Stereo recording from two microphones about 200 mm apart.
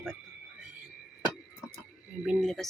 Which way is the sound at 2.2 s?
Centre (ahead or behind).